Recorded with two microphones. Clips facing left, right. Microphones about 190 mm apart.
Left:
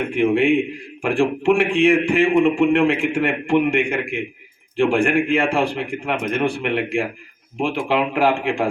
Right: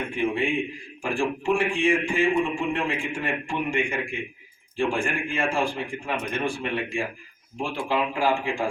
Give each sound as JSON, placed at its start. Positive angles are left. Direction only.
{"t": 0.1, "sound": "a man's voice", "side_deg": 65}